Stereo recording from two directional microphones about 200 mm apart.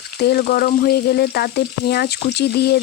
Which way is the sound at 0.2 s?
55° left (ahead or behind).